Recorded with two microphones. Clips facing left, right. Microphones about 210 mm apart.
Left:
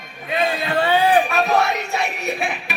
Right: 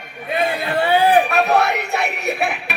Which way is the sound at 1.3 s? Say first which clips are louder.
Right 2 dB; 65° right (ahead or behind).